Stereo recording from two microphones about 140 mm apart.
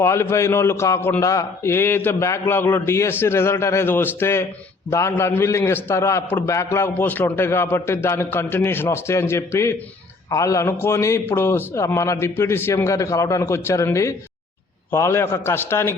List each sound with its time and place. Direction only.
0.0 s a man's voice: 20° left (ahead or behind)